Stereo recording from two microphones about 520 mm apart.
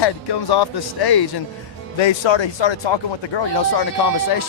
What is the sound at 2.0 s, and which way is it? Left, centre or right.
Speech, left.